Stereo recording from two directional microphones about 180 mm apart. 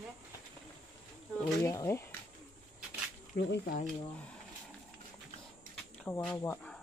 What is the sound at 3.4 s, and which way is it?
Speech, 70° left (ahead or behind).